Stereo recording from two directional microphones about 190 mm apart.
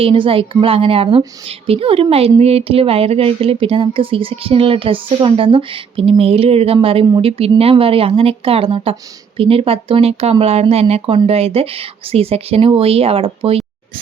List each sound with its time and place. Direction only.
0.0 s a woman's voice: 30° right (ahead or behind)